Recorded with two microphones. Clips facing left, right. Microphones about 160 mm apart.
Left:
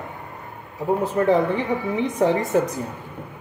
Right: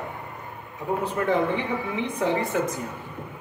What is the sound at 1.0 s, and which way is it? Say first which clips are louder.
A woman's voice: left 4 dB; 35° left (ahead or behind).